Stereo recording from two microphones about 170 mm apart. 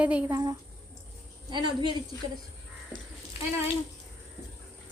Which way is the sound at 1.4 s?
25° right (ahead or behind).